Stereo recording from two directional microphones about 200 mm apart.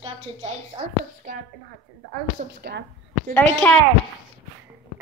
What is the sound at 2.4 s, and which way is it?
Speech, 55° right (ahead or behind).